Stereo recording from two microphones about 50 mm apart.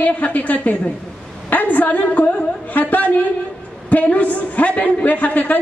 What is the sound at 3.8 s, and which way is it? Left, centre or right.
A man's voice, left.